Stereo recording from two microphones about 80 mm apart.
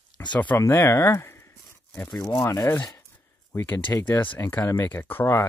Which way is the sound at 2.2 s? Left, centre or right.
Left.